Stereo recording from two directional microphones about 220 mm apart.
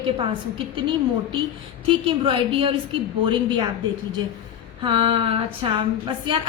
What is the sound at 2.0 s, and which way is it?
A woman's voice, 25° right (ahead or behind).